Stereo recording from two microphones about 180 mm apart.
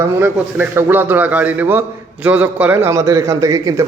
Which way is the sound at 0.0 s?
15° right (ahead or behind).